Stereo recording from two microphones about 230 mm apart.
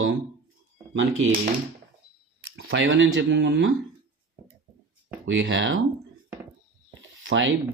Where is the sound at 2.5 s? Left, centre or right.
Right.